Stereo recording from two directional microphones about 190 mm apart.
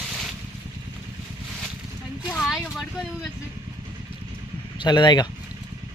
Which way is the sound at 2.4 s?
Centre (ahead or behind).